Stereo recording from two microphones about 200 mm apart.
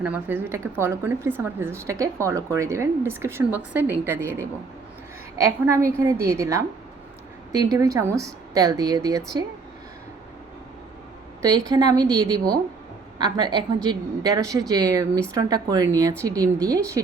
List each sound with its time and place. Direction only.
0.0 s speech: 10° right (ahead or behind)
11.4 s a woman's voice: 20° right (ahead or behind)